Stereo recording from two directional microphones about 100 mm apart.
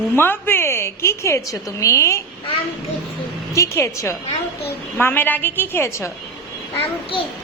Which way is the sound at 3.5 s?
30° left (ahead or behind).